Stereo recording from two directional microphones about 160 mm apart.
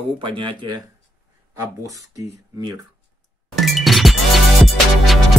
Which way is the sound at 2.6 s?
25° right (ahead or behind).